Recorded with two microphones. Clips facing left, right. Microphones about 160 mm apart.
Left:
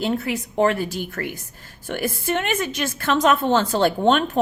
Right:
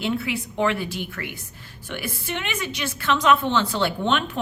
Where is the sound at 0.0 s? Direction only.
40° left (ahead or behind).